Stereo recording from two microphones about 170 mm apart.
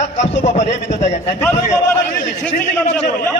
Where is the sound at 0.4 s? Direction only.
40° left (ahead or behind).